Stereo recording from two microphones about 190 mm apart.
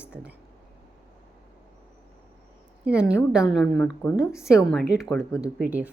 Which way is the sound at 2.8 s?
5° right (ahead or behind).